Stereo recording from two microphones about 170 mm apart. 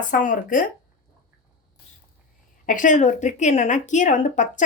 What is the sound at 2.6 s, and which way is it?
Speech, 50° left (ahead or behind).